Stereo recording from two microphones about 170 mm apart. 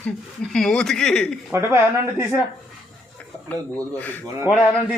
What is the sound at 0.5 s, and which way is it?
Speech, 5° left (ahead or behind).